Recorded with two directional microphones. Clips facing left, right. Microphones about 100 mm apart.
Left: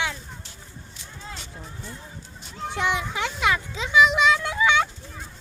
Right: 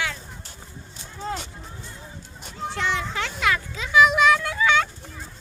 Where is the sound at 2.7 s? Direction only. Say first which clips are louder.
Left 1 dB; 15° left (ahead or behind).